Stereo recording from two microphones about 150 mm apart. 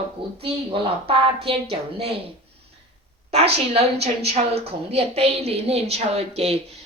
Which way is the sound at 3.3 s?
45° right (ahead or behind).